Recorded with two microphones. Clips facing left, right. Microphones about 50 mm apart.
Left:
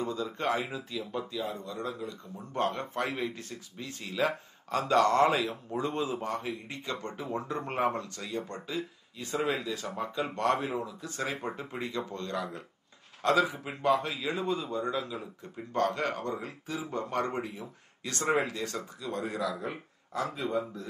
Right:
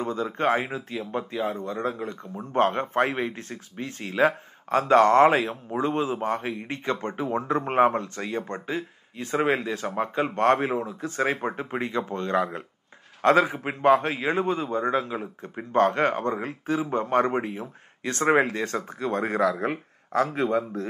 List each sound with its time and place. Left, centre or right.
0.0 s speech: right